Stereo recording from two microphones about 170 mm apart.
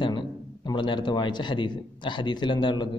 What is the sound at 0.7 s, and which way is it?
A man's voice, 25° left (ahead or behind).